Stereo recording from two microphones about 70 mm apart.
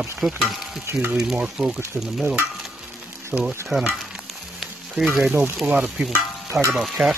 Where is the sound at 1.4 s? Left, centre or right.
Centre.